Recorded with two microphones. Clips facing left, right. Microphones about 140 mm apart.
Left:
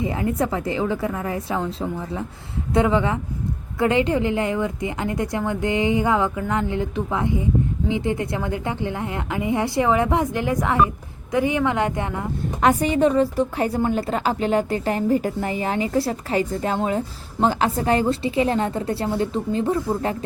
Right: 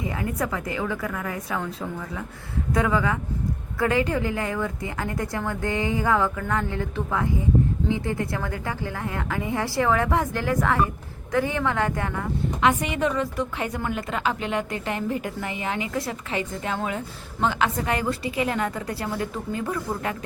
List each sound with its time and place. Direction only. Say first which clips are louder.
0.0 s a woman's voice: left 5 dB; 25° left (ahead or behind)
12.6 s a woman's voice: left 5 dB; 35° left (ahead or behind)